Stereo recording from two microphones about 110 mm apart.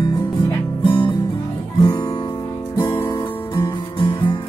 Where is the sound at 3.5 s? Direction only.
45° left (ahead or behind).